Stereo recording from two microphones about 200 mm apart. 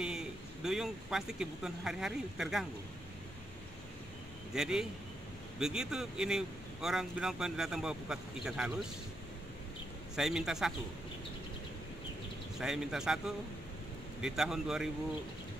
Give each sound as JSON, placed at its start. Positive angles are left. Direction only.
{"t": 0.0, "sound": "speech", "side_deg": -5}
{"t": 4.6, "sound": "speech", "side_deg": -5}
{"t": 10.1, "sound": "speech", "side_deg": -5}
{"t": 12.5, "sound": "speech", "side_deg": 0}
{"t": 14.2, "sound": "speech", "side_deg": 0}